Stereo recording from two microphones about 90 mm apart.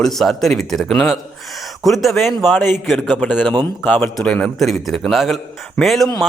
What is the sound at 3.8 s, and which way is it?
A man's voice, 20° left (ahead or behind).